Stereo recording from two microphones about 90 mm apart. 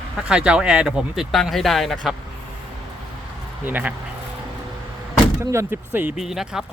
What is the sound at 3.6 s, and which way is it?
Speech, 20° right (ahead or behind).